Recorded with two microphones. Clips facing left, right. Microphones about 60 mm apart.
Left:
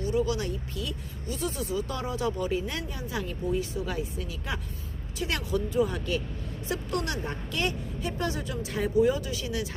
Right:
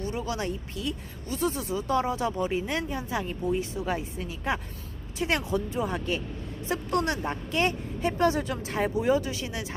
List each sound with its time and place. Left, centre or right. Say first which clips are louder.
0.0 s a woman's voice: left 3 dB; right